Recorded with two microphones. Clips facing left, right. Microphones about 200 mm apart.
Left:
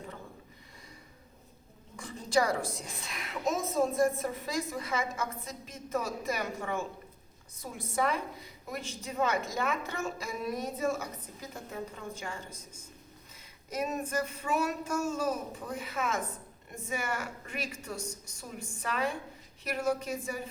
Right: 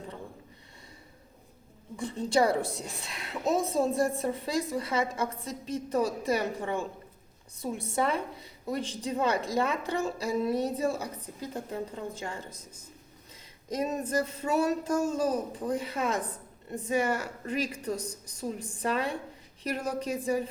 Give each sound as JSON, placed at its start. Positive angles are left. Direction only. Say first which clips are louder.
{"t": 2.0, "sound": "a woman's voice", "louder": "right 3 dB", "side_deg": -30}
{"t": 13.7, "sound": "a woman's voice", "louder": "right 3 dB", "side_deg": -35}